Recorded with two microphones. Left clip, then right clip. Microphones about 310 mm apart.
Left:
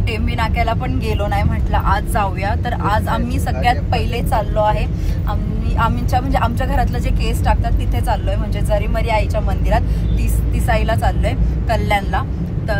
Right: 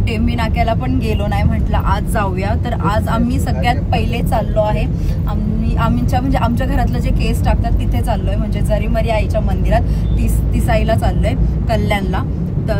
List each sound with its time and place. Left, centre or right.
0.4 s speech: centre
5.8 s speech: centre
8.6 s speech: centre